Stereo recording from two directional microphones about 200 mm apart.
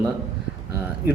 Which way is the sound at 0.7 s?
10° right (ahead or behind).